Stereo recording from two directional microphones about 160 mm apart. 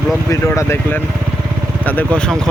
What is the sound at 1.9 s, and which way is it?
Speech, 10° left (ahead or behind).